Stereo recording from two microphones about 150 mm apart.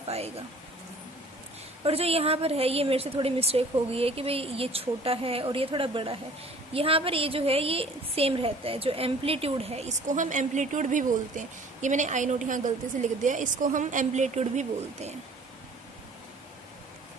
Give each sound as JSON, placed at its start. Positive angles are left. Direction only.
{"t": 0.1, "sound": "a woman's voice", "side_deg": -45}
{"t": 1.8, "sound": "a woman's voice", "side_deg": -40}